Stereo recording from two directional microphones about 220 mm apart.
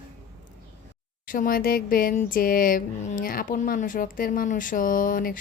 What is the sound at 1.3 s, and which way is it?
Speech, 40° left (ahead or behind).